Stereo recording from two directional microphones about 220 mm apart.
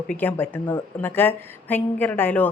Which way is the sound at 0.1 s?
10° left (ahead or behind).